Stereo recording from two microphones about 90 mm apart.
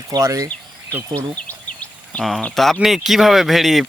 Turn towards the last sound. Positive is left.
turn(degrees=0)  # may be behind; listen again after turning